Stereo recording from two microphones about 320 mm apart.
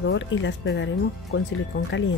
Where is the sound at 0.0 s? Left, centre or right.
Left.